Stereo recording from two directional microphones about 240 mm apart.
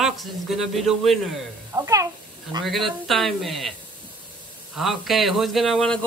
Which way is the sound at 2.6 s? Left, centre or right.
Centre.